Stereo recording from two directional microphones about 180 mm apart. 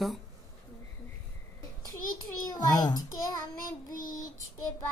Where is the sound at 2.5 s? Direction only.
20° left (ahead or behind).